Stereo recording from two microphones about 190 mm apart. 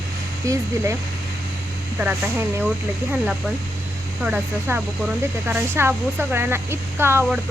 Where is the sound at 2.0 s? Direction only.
10° right (ahead or behind).